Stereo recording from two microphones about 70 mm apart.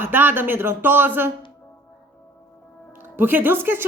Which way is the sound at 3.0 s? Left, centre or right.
Right.